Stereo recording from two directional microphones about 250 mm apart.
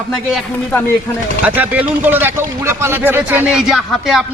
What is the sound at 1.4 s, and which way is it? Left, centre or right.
Speech, centre.